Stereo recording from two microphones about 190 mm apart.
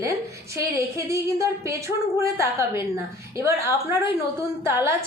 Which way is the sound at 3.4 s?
15° right (ahead or behind).